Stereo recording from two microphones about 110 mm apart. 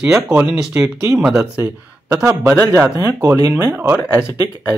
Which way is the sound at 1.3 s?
20° right (ahead or behind).